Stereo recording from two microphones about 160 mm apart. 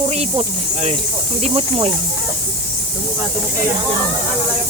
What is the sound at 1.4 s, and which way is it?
Speech, 40° right (ahead or behind).